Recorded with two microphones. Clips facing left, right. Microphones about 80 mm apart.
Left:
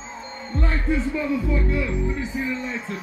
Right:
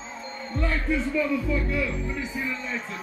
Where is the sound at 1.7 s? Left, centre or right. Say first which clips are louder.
Left 3 dB; left.